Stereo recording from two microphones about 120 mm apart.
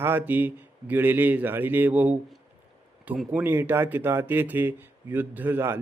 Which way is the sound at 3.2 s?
20° right (ahead or behind).